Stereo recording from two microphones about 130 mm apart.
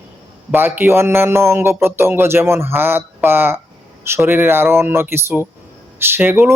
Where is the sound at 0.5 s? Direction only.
15° right (ahead or behind).